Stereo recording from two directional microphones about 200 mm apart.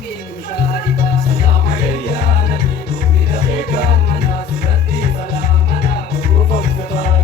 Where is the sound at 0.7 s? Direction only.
50° left (ahead or behind).